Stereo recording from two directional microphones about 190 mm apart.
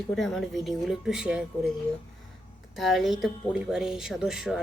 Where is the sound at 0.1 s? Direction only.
5° left (ahead or behind).